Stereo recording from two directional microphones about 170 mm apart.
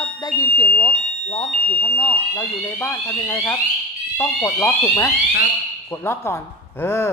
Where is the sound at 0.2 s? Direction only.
20° left (ahead or behind).